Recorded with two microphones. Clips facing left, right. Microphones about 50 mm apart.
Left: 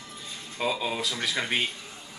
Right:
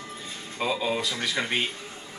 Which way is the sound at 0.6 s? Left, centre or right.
Centre.